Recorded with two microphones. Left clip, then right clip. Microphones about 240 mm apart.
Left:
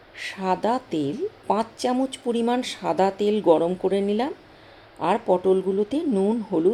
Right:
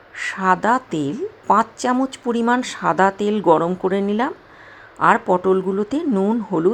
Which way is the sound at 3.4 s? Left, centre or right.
Right.